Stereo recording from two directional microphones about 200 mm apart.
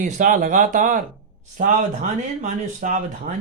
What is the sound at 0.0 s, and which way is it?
Speech, 40° right (ahead or behind).